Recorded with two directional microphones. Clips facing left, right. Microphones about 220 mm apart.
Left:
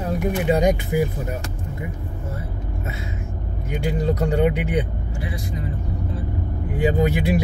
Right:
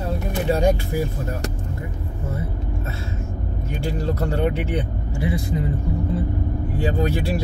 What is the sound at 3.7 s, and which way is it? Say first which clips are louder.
Speech: left 3 dB; 15° left (ahead or behind).